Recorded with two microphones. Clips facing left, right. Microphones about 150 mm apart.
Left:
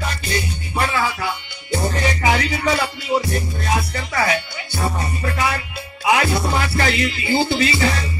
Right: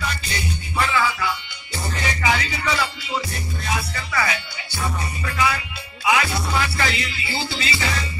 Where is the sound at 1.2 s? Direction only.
50° left (ahead or behind).